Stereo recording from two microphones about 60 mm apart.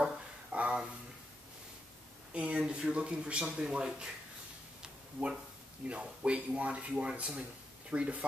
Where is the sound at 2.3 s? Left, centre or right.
Centre.